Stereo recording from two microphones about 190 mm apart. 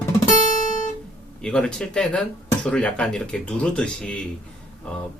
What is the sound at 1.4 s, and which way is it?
Speech, 5° left (ahead or behind).